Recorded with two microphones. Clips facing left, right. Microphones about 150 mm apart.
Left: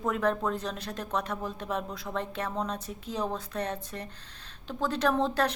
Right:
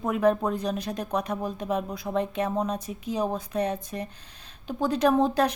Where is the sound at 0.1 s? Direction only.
15° right (ahead or behind).